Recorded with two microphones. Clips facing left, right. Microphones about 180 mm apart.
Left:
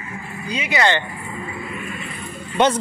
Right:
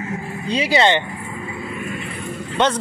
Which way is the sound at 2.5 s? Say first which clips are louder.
Left 2 dB; 10° left (ahead or behind).